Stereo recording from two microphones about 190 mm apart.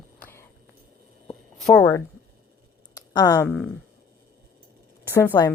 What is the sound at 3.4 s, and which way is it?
Speech, 5° left (ahead or behind).